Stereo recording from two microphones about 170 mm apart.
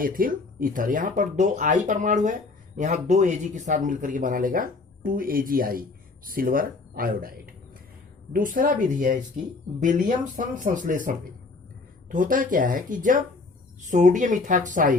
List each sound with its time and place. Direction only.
0.0 s speech: 55° right (ahead or behind)